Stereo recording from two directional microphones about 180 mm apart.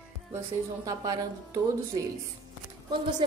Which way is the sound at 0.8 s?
20° right (ahead or behind).